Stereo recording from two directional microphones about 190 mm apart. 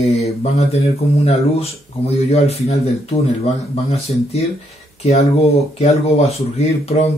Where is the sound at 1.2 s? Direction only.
30° left (ahead or behind).